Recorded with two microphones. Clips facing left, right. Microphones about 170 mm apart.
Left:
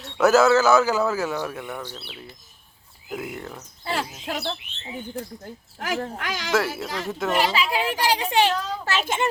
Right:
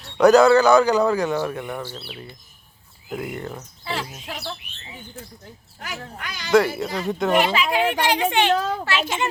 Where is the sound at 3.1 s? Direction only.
5° left (ahead or behind).